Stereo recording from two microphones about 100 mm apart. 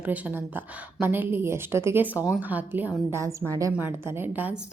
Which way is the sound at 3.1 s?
30° right (ahead or behind).